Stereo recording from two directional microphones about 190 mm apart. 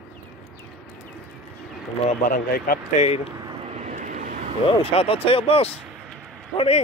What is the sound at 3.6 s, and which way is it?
Vehicle, 35° right (ahead or behind).